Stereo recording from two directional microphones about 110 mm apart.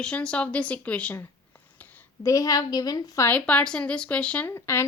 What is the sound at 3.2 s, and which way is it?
Speech, 15° left (ahead or behind).